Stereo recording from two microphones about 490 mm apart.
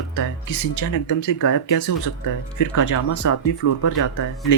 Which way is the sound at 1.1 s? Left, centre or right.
Left.